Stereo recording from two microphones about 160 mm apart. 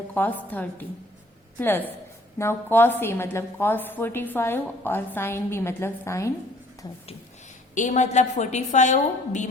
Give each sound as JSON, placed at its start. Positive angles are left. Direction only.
{"t": 0.1, "sound": "a woman's voice", "side_deg": 10}
{"t": 7.8, "sound": "a woman's voice", "side_deg": 50}